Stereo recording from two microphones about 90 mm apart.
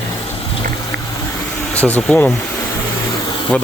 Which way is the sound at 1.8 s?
20° left (ahead or behind).